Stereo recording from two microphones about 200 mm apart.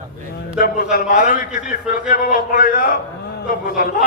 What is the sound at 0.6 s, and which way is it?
A man's voice, 45° left (ahead or behind).